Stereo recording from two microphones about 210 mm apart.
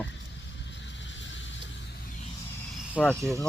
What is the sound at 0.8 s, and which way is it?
Vehicle, 60° left (ahead or behind).